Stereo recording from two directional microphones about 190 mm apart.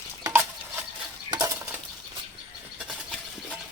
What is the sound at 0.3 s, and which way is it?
Stir, 10° right (ahead or behind).